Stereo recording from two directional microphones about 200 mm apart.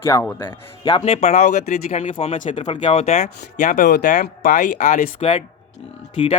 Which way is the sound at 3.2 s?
45° left (ahead or behind).